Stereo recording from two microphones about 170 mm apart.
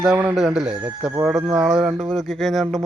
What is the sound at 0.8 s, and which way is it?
Speech, 15° right (ahead or behind).